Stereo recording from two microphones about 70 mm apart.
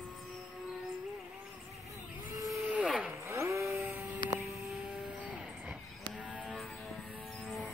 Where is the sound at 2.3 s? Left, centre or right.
Right.